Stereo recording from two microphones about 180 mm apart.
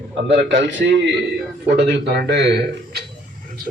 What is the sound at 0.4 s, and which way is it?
Speech, 85° right.